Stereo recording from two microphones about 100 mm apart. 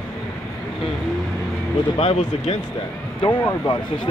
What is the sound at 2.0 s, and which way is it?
Speech, 90° left.